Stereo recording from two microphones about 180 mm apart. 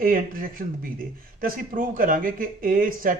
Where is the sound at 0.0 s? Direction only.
50° right (ahead or behind).